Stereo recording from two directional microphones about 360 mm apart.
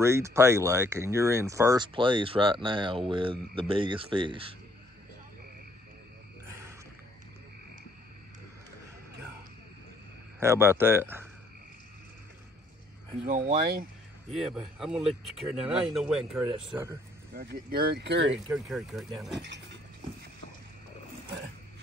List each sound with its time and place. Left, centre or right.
0.0 s speech: centre
10.4 s speech: centre
13.2 s speech: right
14.8 s speech: centre
17.3 s speech: right
18.5 s speech: centre